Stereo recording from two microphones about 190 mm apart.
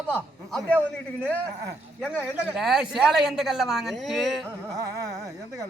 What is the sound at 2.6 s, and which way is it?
A man's voice, centre (ahead or behind).